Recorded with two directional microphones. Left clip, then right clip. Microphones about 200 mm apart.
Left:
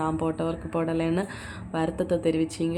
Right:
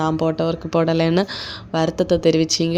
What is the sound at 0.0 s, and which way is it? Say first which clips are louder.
Speech: right 8 dB; 35° right (ahead or behind).